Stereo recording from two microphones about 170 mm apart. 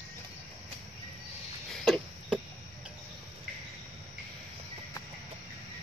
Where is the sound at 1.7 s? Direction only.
5° right (ahead or behind).